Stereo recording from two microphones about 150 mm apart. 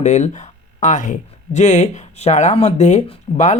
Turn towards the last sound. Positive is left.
turn(degrees=50)  # may be behind; listen again after turning